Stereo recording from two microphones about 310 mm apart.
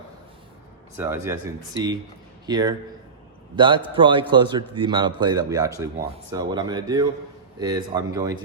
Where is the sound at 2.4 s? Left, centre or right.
Centre.